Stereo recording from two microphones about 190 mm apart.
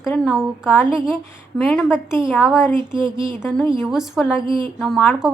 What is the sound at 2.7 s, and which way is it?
Speech, 25° right (ahead or behind).